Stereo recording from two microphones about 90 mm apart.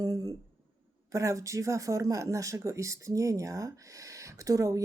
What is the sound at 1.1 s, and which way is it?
Speech, 35° right (ahead or behind).